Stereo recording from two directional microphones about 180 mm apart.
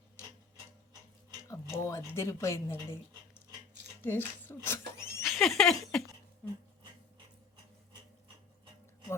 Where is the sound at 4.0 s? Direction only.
10° left (ahead or behind).